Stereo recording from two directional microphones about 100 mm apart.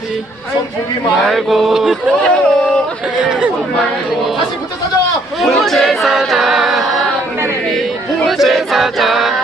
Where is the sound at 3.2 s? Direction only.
5° right (ahead or behind).